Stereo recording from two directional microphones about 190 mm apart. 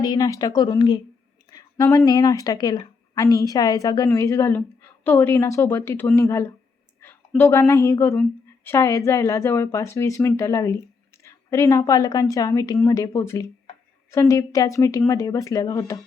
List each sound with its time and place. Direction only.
0.0 s a woman's voice: 20° left (ahead or behind)
1.5 s a sound: 20° left (ahead or behind)
2.0 s a woman's voice: 20° left (ahead or behind)